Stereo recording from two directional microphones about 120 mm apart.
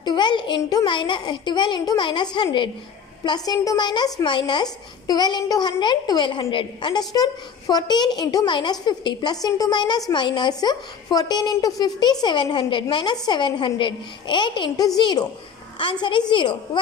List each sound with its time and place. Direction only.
0.0 s a child's voice: 40° left (ahead or behind)